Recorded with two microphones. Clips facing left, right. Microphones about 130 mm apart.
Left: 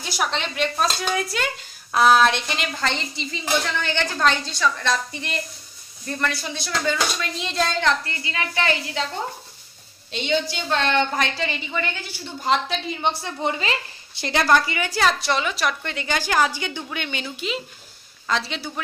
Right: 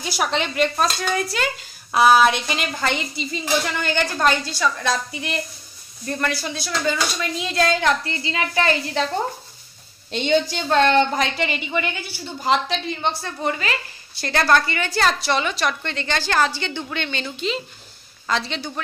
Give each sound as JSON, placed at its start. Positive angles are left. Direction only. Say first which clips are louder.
{"t": 0.0, "sound": "a woman's voice", "louder": "right 3 dB", "side_deg": -5}
{"t": 8.1, "sound": "a woman's voice", "louder": "right 4 dB", "side_deg": -25}
{"t": 10.1, "sound": "a woman's voice", "louder": "right 4 dB", "side_deg": -45}
{"t": 11.1, "sound": "a woman's voice", "louder": "right 2 dB", "side_deg": -20}
{"t": 13.0, "sound": "a woman's voice", "louder": "left 2 dB", "side_deg": 20}